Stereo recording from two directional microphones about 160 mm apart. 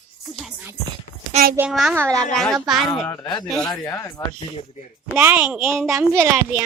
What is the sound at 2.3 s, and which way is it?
Speech, 5° left (ahead or behind).